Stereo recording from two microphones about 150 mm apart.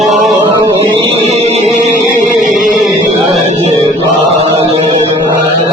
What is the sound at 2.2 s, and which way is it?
Music, 55° right (ahead or behind).